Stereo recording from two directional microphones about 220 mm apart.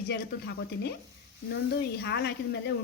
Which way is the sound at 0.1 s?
50° left (ahead or behind).